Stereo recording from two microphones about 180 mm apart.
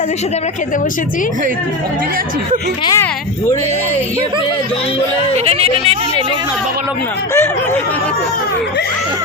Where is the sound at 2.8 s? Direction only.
15° left (ahead or behind).